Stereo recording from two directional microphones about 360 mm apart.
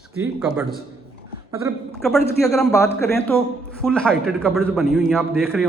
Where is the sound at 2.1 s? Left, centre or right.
Centre.